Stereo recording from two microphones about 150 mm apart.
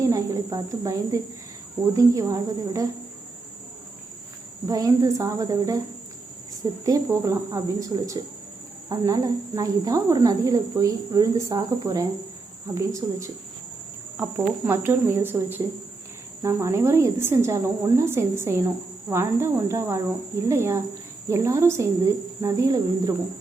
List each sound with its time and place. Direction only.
0.0 s speech: 20° right (ahead or behind)
4.6 s speech: 25° right (ahead or behind)